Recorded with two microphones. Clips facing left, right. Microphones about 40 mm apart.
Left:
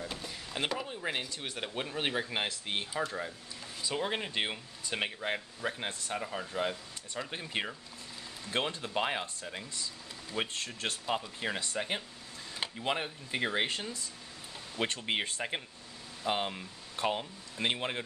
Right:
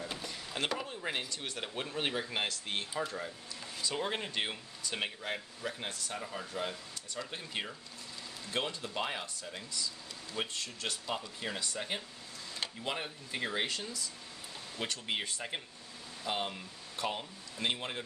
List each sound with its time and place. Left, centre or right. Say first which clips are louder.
0.0 s a sound: even; centre
1.3 s speech: left 2 dB; centre
3.8 s speech: left 2 dB; centre; by 11.0 s left
11.1 s speech: left 7 dB; left
16.3 s speech: left 3 dB; centre